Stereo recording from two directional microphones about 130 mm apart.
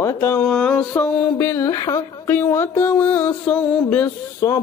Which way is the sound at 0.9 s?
20° left (ahead or behind).